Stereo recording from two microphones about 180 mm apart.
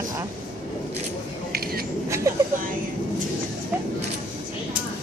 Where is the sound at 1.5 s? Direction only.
55° right (ahead or behind).